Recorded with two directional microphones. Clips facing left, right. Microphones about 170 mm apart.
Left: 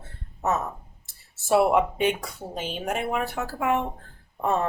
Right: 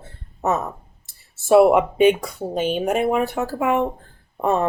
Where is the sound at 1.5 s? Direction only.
20° right (ahead or behind).